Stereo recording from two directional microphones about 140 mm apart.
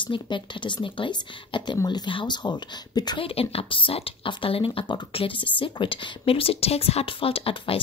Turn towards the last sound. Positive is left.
turn(degrees=40)  # may be behind; listen again after turning